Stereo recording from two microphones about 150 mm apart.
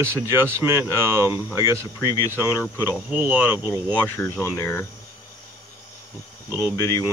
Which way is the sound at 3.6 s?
15° left (ahead or behind).